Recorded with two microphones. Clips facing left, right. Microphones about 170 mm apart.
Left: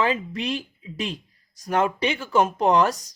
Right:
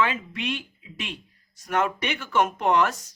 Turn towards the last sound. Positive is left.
turn(degrees=35)  # may be behind; listen again after turning